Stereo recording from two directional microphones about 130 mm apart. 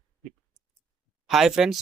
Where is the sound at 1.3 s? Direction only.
Centre (ahead or behind).